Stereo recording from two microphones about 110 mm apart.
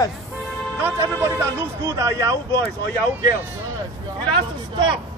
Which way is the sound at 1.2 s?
30° right (ahead or behind).